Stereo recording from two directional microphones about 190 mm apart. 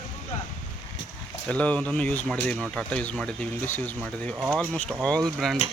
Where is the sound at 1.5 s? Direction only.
5° left (ahead or behind).